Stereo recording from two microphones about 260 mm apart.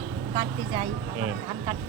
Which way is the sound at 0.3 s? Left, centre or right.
Centre.